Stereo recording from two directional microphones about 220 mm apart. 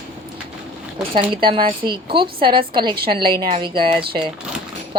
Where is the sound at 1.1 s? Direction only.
25° right (ahead or behind).